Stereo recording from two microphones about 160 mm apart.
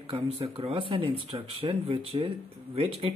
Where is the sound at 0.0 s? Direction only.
35° right (ahead or behind).